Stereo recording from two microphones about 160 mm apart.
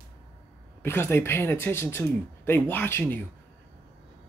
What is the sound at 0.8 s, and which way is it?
Speech, 15° left (ahead or behind).